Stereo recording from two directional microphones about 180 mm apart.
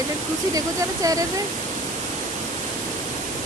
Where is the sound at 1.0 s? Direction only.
20° right (ahead or behind).